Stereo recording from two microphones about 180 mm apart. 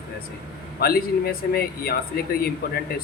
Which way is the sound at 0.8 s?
60° left (ahead or behind).